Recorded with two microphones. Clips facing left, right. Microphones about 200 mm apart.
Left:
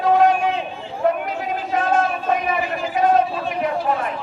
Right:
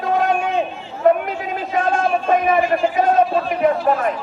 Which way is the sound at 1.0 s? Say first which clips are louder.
Right 5 dB; 50° right (ahead or behind).